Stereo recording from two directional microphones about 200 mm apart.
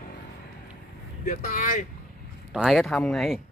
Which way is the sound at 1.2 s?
40° left (ahead or behind).